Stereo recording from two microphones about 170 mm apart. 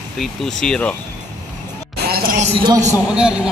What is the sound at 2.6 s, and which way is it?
Speech, 20° right (ahead or behind).